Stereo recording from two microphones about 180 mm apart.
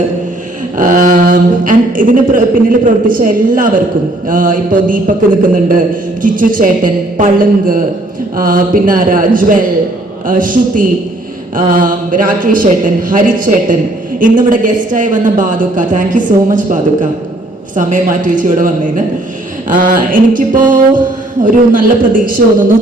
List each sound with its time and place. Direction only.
0.8 s a woman's voice: 45° right (ahead or behind)